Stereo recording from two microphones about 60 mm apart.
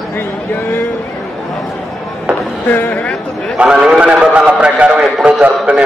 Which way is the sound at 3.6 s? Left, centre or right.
Centre.